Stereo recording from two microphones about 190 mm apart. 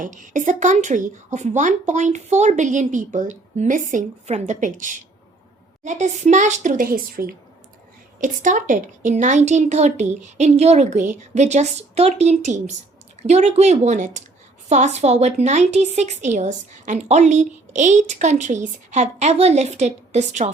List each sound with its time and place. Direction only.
0.0 s a woman's voice: 40° right (ahead or behind)